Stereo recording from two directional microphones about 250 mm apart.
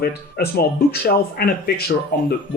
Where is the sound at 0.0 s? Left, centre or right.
Left.